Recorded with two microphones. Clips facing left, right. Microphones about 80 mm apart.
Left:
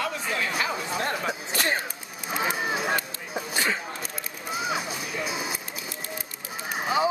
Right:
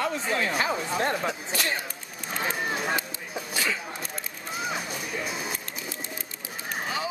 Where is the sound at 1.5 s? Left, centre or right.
Left.